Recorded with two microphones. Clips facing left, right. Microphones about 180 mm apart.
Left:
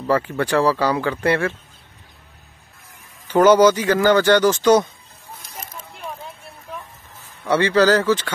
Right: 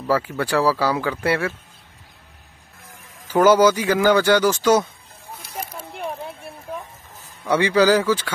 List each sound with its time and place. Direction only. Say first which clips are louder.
0.1 s speech: left 2 dB; 5° right (ahead or behind)
3.3 s speech: left 2 dB; 10° right (ahead or behind)
5.4 s a sound: right 6 dB; 10° right (ahead or behind)
7.4 s speech: left 1 dB; 10° right (ahead or behind)